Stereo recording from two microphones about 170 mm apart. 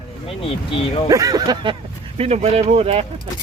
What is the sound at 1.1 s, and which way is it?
Speech, 20° right (ahead or behind).